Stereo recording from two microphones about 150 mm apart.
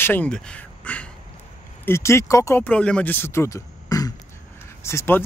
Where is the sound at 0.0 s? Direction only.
10° left (ahead or behind).